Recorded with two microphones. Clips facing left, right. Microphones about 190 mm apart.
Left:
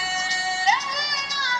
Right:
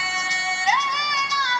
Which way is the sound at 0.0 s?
35° left (ahead or behind).